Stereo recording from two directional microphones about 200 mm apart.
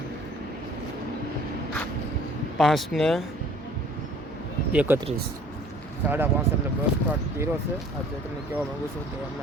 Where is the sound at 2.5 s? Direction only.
Centre (ahead or behind).